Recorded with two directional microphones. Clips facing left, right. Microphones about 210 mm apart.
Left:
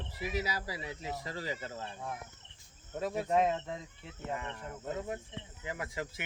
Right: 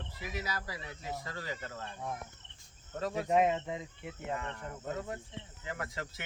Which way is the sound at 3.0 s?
10° left (ahead or behind).